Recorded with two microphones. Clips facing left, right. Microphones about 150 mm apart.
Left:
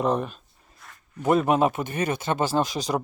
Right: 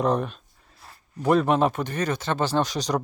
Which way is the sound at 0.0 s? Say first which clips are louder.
Right 1 dB; centre (ahead or behind).